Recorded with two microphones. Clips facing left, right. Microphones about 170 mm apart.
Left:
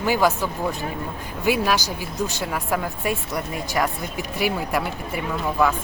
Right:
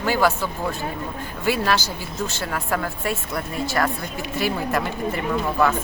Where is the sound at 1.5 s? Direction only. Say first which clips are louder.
Left 1 dB; 15° left (ahead or behind).